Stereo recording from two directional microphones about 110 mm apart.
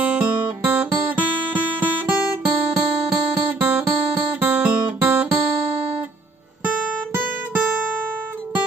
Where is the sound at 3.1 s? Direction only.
15° right (ahead or behind).